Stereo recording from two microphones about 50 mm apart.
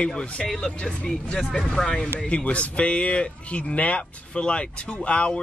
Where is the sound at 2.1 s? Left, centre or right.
Left.